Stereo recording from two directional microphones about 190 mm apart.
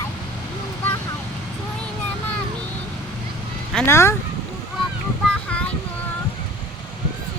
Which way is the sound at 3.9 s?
15° left (ahead or behind).